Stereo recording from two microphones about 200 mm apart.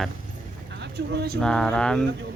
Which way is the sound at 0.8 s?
55° right (ahead or behind).